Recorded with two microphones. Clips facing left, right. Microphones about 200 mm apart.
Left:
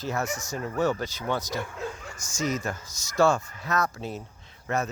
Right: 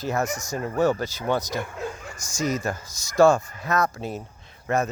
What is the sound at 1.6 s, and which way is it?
Bow-wow, 55° right (ahead or behind).